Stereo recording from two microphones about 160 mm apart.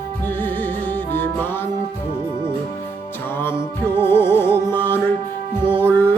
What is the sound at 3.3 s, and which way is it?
Music, 15° left (ahead or behind).